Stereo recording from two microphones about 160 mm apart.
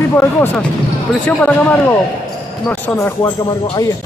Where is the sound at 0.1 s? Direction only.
15° left (ahead or behind).